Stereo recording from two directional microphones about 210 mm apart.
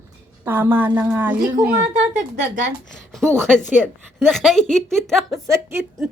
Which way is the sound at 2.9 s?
Centre (ahead or behind).